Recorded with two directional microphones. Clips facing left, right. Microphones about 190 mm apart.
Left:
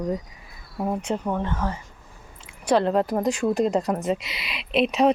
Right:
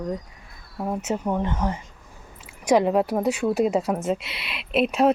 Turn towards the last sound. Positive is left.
turn(degrees=-5)  # may be behind; listen again after turning